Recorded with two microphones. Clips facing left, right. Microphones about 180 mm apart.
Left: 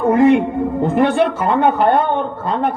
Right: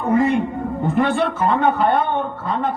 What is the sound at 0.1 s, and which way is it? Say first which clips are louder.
Music: left 5 dB; 70° left (ahead or behind).